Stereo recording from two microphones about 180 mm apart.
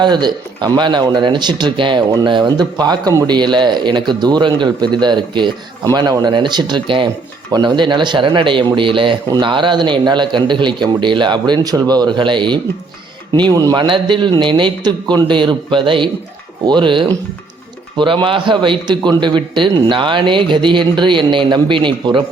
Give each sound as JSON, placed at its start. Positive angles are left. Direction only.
{"t": 0.0, "sound": "speech", "side_deg": -25}